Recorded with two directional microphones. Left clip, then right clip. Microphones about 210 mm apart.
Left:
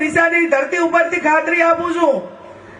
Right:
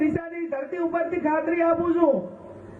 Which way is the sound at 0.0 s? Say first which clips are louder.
Left 13 dB; 10° left (ahead or behind).